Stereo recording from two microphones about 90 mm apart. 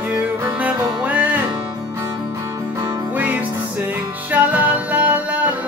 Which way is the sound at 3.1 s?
20° right (ahead or behind).